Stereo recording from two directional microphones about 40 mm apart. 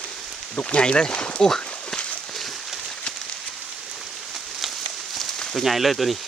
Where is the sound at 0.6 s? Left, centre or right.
Left.